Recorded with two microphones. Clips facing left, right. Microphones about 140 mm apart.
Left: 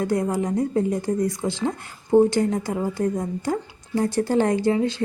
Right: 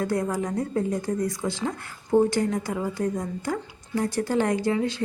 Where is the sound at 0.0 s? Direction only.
20° left (ahead or behind).